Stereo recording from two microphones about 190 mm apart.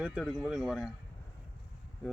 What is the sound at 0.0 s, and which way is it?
Speech, 5° right (ahead or behind).